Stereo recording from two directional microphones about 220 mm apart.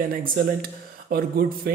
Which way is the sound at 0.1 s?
40° right (ahead or behind).